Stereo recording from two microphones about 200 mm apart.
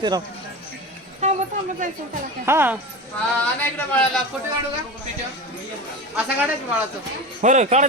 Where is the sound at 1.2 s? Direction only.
35° right (ahead or behind).